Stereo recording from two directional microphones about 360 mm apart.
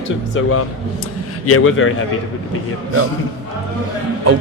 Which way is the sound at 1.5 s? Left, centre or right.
Left.